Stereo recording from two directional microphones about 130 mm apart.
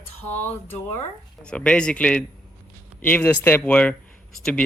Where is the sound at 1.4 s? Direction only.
5° left (ahead or behind).